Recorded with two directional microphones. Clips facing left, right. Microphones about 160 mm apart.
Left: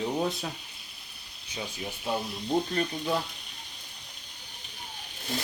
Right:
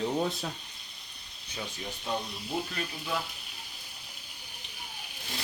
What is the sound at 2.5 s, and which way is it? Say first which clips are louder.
Speech: left 7 dB; 40° left (ahead or behind).